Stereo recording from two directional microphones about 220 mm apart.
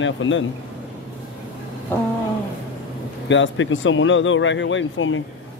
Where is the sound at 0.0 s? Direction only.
60° left (ahead or behind).